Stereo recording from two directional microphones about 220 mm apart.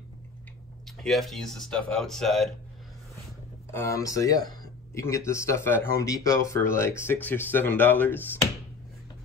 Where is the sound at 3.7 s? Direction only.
15° left (ahead or behind).